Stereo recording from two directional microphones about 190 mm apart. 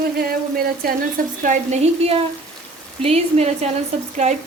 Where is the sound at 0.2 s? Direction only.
50° right (ahead or behind).